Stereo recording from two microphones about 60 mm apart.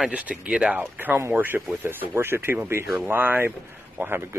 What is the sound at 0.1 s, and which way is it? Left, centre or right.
Speech, right.